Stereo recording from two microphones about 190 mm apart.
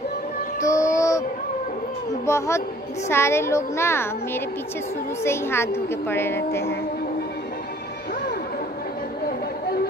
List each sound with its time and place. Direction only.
0.6 s music: 15° left (ahead or behind)
2.2 s a woman's voice: 15° left (ahead or behind)